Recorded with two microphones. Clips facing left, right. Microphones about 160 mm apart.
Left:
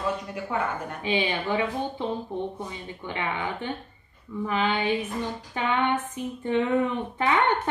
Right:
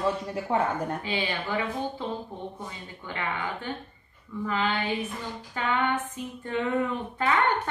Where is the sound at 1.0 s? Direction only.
20° left (ahead or behind).